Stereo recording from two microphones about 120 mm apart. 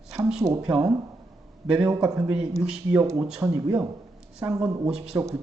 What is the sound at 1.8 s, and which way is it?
Speech, 30° right (ahead or behind).